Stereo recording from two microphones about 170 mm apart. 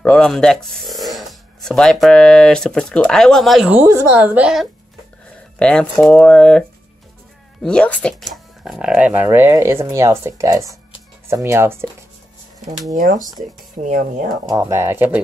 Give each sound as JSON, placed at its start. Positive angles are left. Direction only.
{"t": 0.0, "sound": "speech", "side_deg": 5}
{"t": 5.6, "sound": "speech", "side_deg": 5}
{"t": 7.6, "sound": "speech", "side_deg": 5}
{"t": 10.6, "sound": "music", "side_deg": 20}
{"t": 11.2, "sound": "speech", "side_deg": -15}
{"t": 12.9, "sound": "speech", "side_deg": -55}
{"t": 14.5, "sound": "speech", "side_deg": -15}